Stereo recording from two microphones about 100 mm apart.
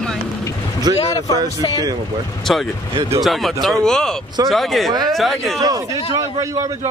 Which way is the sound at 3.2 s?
Centre (ahead or behind).